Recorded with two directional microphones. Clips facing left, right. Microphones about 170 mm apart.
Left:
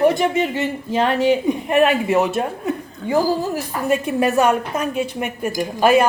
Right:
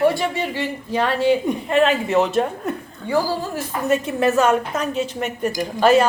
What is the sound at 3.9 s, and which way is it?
Speech, 15° left (ahead or behind).